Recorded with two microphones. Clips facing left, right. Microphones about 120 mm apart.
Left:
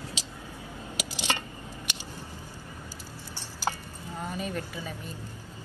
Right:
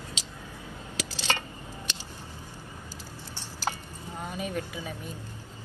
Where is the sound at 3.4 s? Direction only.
10° left (ahead or behind).